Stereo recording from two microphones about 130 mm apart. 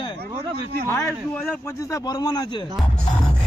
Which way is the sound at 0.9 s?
20° left (ahead or behind).